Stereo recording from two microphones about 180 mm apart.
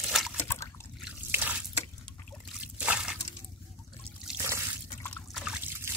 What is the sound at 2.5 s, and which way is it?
Trickle, 5° right (ahead or behind).